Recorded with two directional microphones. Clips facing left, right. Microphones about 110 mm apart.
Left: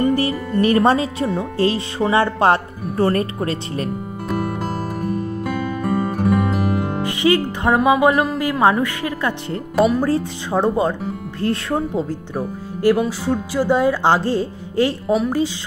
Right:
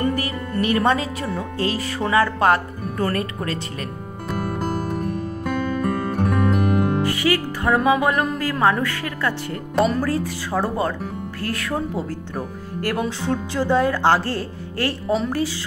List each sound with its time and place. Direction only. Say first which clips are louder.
0.1 s speech: left 6 dB; 30° left (ahead or behind)
4.3 s music: left 1 dB; centre (ahead or behind)
7.0 s music: left 3 dB; 20° left (ahead or behind)
8.4 s speech: left 3 dB; 15° left (ahead or behind)
12.4 s speech: left 5 dB; 5° left (ahead or behind)